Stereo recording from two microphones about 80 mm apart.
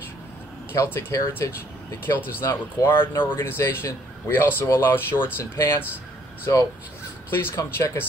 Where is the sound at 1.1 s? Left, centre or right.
Left.